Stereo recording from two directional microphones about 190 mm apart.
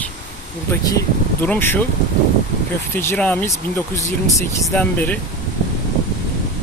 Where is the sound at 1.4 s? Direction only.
10° left (ahead or behind).